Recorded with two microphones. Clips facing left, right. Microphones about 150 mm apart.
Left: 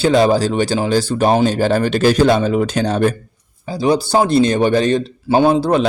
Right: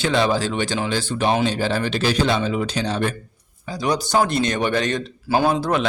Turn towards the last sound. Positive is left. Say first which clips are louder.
# left 6 dB
turn(degrees=30)  # may be behind; listen again after turning